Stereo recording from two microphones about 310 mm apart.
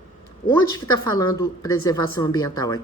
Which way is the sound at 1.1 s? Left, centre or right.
Centre.